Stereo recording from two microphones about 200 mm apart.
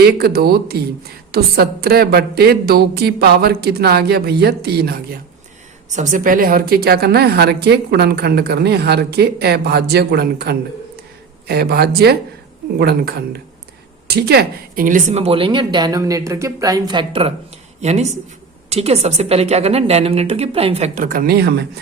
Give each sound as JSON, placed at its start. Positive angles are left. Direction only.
{"t": 0.0, "sound": "a woman's voice", "side_deg": -50}
{"t": 5.9, "sound": "a woman's voice", "side_deg": -40}